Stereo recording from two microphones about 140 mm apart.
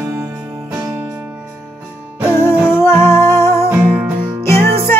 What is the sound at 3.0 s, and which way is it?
Music, 15° left (ahead or behind).